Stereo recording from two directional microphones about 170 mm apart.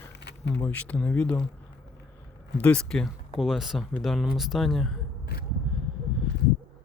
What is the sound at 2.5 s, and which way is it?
Speech, 5° left (ahead or behind).